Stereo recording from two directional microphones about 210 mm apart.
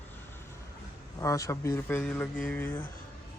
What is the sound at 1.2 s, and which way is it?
Speech, 15° left (ahead or behind).